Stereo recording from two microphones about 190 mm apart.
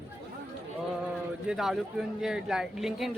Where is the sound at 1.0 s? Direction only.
5° right (ahead or behind).